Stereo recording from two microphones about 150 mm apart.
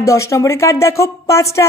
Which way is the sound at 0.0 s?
20° left (ahead or behind).